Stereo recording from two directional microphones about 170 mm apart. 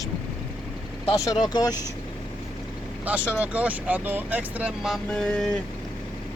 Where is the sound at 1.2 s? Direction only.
20° left (ahead or behind).